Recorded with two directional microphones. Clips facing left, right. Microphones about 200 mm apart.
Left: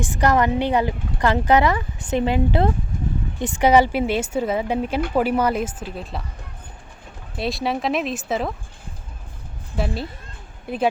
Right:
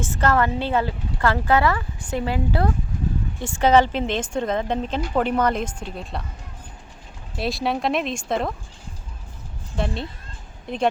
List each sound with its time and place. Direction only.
0.0 s speech: 15° left (ahead or behind)
7.3 s speech: centre (ahead or behind)
9.7 s speech: 5° left (ahead or behind)